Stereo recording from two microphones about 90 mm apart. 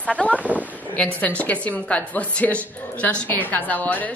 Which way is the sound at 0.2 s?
10° left (ahead or behind).